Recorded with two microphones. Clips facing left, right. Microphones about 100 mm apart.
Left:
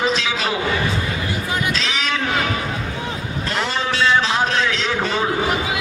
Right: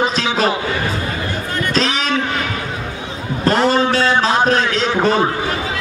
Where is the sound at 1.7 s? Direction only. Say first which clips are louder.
Right 5 dB; 40° right (ahead or behind).